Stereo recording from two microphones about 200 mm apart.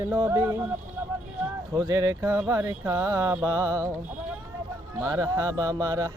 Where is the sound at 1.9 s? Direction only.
15° right (ahead or behind).